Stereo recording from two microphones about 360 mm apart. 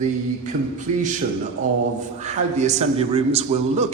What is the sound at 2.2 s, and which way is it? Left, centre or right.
A man's voice, centre.